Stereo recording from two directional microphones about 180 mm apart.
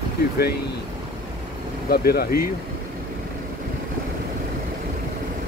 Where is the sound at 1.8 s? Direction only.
60° left (ahead or behind).